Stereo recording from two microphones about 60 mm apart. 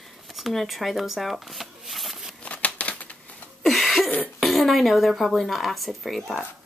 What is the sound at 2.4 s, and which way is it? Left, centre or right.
Crumpling, left.